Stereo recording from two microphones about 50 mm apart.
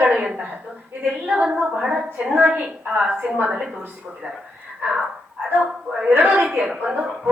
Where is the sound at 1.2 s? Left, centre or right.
Right.